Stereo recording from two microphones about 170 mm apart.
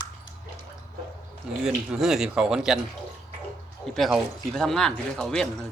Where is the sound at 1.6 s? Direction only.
5° right (ahead or behind).